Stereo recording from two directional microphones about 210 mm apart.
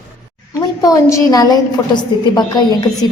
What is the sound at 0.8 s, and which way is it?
A woman's voice, 15° left (ahead or behind).